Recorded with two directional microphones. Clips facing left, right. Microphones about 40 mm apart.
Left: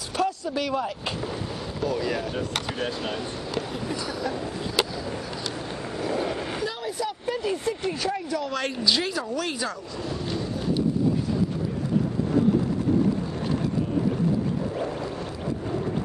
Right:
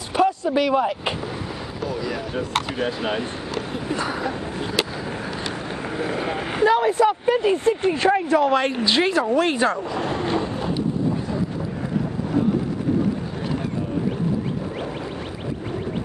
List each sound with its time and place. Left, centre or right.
0.1 s vehicle: right
1.9 s speech: centre
2.8 s speech: right
3.9 s speech: right
5.9 s vehicle: right
6.7 s speech: right
9.9 s train: right